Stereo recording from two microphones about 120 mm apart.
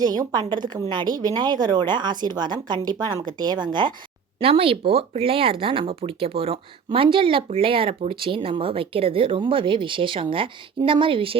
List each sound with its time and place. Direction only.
0.0 s a woman's voice: 35° right (ahead or behind)
4.4 s speech: 50° right (ahead or behind)